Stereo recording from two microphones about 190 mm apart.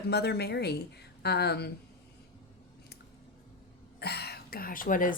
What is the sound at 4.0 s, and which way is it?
Speech, 55° left (ahead or behind).